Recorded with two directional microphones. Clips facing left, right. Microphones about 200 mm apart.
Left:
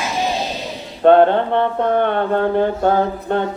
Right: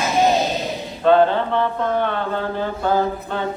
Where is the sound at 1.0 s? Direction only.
60° left (ahead or behind).